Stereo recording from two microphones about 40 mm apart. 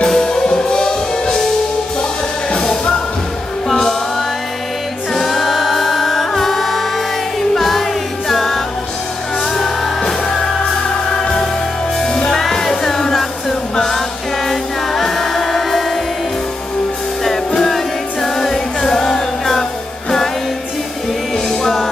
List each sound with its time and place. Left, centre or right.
0.0 s music: centre
5.1 s music: centre
17.6 s music: centre
21.5 s music: centre